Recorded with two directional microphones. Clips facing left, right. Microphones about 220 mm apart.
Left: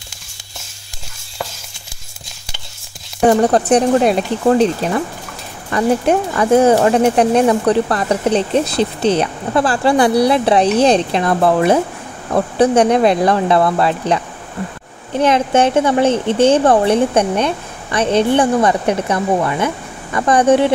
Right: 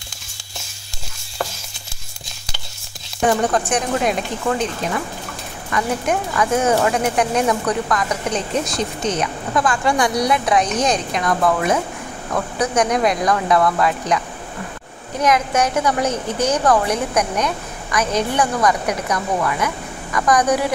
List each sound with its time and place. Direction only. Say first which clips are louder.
3.3 s a woman's voice: left 7 dB; 35° left (ahead or behind)